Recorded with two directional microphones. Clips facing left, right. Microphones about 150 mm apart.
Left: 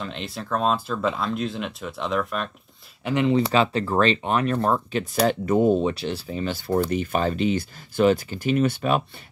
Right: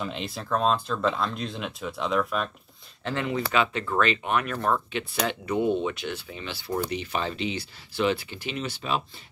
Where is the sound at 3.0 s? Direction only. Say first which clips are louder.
Left 7 dB; 10° left (ahead or behind).